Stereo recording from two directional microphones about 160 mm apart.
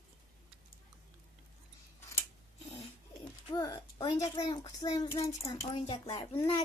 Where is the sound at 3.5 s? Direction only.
25° left (ahead or behind).